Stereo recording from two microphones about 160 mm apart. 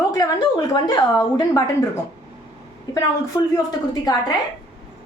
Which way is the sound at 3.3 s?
25° left (ahead or behind).